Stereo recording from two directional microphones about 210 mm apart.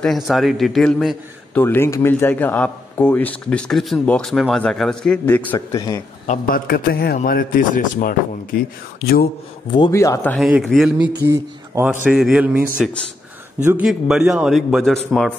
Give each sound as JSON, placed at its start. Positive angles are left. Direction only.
{"t": 0.0, "sound": "a man's voice", "side_deg": 0}
{"t": 6.2, "sound": "a man's voice", "side_deg": 40}
{"t": 9.7, "sound": "a man's voice", "side_deg": 20}
{"t": 10.4, "sound": "a man's voice", "side_deg": 0}
{"t": 11.2, "sound": "a man's voice", "side_deg": -10}